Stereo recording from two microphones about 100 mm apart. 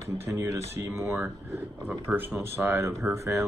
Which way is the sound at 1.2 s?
20° right (ahead or behind).